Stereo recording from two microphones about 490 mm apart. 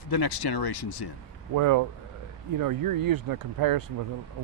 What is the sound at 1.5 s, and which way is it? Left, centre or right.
Speech, right.